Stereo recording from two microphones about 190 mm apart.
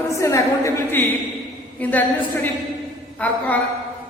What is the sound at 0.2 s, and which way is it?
A woman's voice, 15° left (ahead or behind).